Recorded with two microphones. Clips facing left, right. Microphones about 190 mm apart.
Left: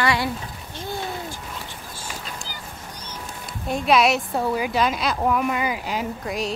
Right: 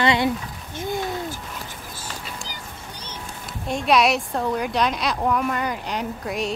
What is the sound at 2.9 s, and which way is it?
Music, 30° right (ahead or behind).